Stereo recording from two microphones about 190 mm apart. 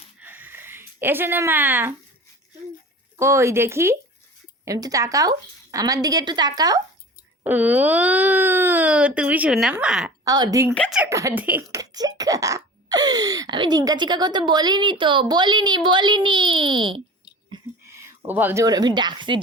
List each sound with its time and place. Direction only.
0.2 s a sound: 10° right (ahead or behind)
3.2 s speech: 15° right (ahead or behind)
7.4 s speech: 10° right (ahead or behind)
10.2 s speech: 20° right (ahead or behind)
10.8 s speech: 5° left (ahead or behind)
11.0 s speech: 15° right (ahead or behind)
17.5 s a woman's voice: 15° right (ahead or behind)